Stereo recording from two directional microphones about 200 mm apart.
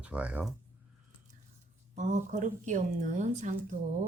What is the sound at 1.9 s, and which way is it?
Speech, 35° right (ahead or behind).